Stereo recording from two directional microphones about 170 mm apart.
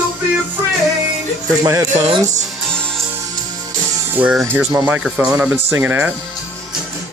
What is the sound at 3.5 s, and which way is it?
Music, 15° right (ahead or behind).